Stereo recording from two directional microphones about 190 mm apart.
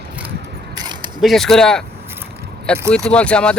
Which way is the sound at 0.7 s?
20° right (ahead or behind).